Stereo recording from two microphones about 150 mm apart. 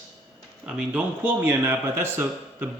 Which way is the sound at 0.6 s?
5° right (ahead or behind).